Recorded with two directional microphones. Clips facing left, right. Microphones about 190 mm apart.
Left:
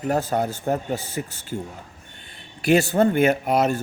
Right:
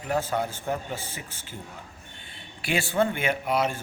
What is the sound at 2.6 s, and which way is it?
Speech, 40° left (ahead or behind).